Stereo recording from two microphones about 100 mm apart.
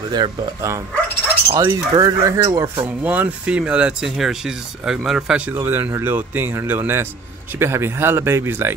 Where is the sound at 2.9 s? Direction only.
15° right (ahead or behind).